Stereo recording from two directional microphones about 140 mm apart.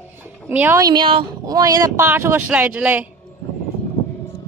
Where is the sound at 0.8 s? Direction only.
30° right (ahead or behind); by 3.1 s 10° right (ahead or behind).